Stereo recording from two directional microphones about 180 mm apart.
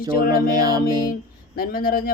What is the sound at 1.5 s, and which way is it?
Speech, 55° left (ahead or behind).